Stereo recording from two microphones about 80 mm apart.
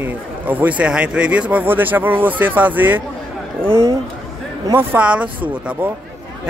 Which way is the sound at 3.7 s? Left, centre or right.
Right.